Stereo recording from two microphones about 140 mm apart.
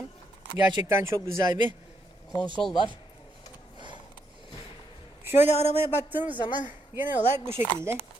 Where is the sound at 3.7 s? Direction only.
35° right (ahead or behind).